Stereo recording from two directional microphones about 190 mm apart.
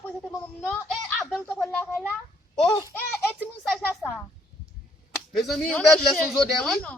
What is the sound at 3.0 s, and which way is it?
Speech, 10° left (ahead or behind).